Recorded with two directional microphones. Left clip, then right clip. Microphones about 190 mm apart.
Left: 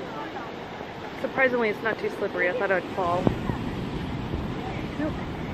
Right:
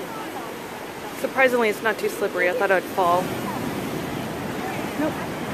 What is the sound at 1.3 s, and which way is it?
Speech, 25° right (ahead or behind).